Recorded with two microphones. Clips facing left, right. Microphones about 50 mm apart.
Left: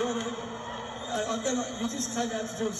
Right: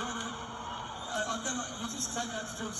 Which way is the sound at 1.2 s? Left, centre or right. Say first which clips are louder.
Left 5 dB; left.